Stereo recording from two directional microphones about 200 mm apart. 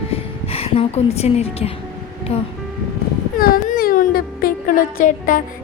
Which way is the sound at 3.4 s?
45° left (ahead or behind).